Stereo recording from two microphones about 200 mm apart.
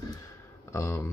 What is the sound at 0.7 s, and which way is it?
Speech, 15° left (ahead or behind).